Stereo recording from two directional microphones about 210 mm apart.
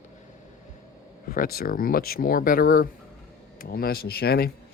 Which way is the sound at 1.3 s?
45° left (ahead or behind).